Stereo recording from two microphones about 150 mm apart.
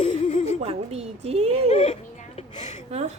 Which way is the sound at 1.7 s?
45° left (ahead or behind).